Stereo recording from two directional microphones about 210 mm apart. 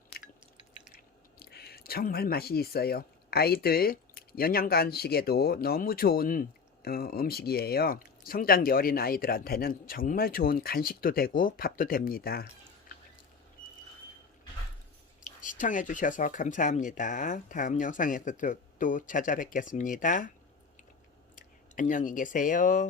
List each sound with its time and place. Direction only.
1.4 s speech: 50° left (ahead or behind)
15.4 s speech: 40° left (ahead or behind)
21.3 s speech: 40° left (ahead or behind)